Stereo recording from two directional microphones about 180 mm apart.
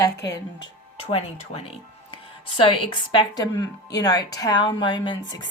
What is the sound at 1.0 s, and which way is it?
A woman's voice, 35° left (ahead or behind).